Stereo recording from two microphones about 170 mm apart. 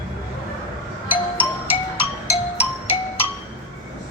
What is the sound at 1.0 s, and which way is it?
Music, 10° right (ahead or behind).